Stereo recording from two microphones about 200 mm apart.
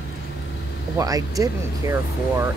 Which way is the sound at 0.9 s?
15° right (ahead or behind).